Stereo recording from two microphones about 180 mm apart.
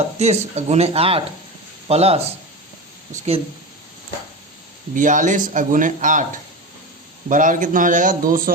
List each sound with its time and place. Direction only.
0.2 s speech: 35° right (ahead or behind)
4.9 s a man's voice: 45° right (ahead or behind)
7.3 s a man's voice: 45° right (ahead or behind)